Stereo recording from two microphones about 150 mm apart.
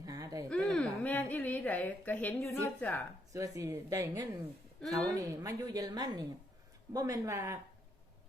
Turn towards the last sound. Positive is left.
turn(degrees=-20)  # may be behind; listen again after turning